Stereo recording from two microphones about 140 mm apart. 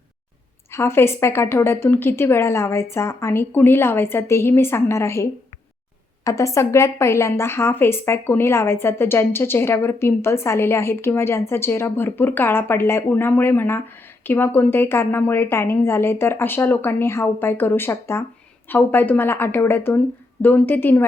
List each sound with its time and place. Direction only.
0.7 s a woman's voice: 20° left (ahead or behind)